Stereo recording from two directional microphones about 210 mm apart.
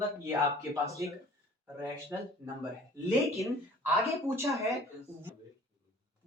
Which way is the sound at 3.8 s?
10° right (ahead or behind).